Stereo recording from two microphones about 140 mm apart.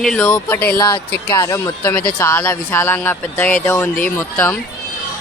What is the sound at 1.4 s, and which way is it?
Speech, 20° left (ahead or behind).